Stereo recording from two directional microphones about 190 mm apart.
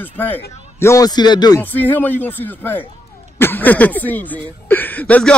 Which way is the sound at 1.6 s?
10° left (ahead or behind).